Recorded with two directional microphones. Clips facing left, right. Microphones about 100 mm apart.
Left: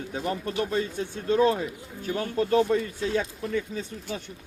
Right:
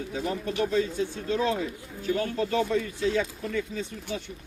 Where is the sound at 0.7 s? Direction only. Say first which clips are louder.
Right 2 dB; 50° left (ahead or behind).